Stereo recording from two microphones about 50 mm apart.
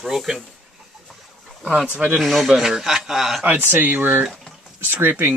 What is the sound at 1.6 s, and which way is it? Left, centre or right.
Speech, right.